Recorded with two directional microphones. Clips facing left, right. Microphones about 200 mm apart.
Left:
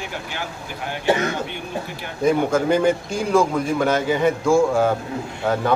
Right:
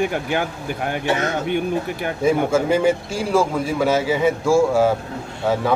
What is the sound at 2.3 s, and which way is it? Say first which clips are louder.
A man's voice: even; 5° right (ahead or behind).